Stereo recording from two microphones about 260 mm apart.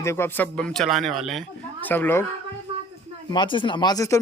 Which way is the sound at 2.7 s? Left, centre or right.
Right.